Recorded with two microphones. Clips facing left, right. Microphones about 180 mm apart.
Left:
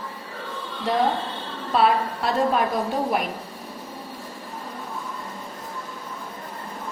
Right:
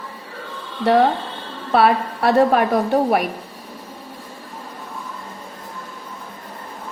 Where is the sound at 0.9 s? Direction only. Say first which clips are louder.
Right 7 dB; 70° right (ahead or behind).